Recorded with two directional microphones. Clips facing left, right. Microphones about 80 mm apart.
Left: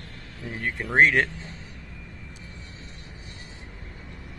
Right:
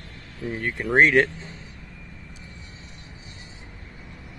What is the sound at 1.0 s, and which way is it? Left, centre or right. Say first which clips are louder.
Speech: right 2 dB; centre.